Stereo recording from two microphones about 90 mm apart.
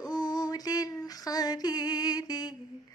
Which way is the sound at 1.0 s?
45° left (ahead or behind).